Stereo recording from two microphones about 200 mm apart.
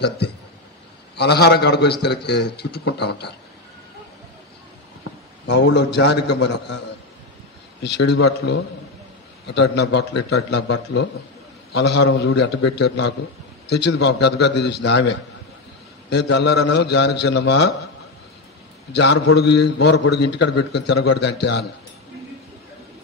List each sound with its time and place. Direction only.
1.1 s a man's voice: 55° left (ahead or behind)
5.5 s a man's voice: 60° left (ahead or behind)
7.8 s a man's voice: 60° left (ahead or behind)
18.9 s a man's voice: 60° left (ahead or behind)